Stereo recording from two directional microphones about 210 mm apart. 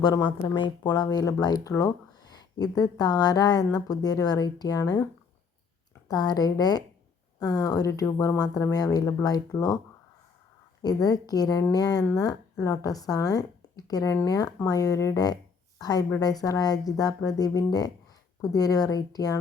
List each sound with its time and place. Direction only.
0.0 s speech: 20° left (ahead or behind)
6.1 s speech: 20° left (ahead or behind)
10.8 s speech: 20° left (ahead or behind)